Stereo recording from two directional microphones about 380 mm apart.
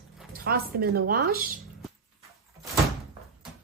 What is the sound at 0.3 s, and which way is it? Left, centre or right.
Speech, right.